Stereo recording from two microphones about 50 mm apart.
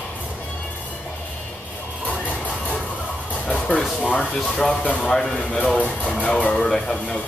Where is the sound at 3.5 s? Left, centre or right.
Centre.